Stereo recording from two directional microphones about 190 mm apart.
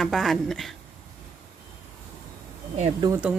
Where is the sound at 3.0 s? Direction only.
20° right (ahead or behind).